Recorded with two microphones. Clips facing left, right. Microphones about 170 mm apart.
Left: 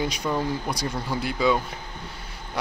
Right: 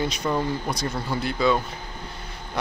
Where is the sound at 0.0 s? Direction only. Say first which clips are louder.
Right 1 dB; 10° left (ahead or behind).